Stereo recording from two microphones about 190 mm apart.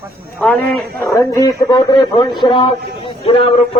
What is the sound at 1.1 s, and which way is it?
Speech, 20° left (ahead or behind).